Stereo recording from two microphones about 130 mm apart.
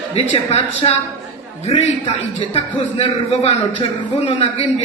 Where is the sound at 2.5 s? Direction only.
50° left (ahead or behind).